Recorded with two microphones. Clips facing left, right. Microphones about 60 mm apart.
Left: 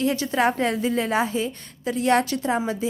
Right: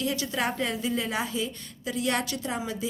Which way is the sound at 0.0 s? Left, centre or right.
Left.